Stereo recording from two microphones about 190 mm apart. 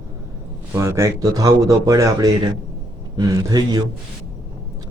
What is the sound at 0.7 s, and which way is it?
Speech, 15° right (ahead or behind).